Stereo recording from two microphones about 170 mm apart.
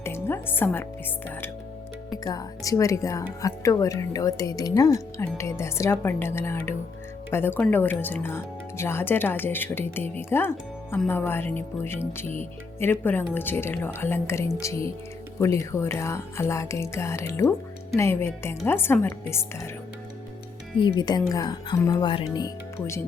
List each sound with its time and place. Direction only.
0.0 s speech: 15° left (ahead or behind)
2.2 s speech: 20° left (ahead or behind)
20.7 s speech: 25° left (ahead or behind)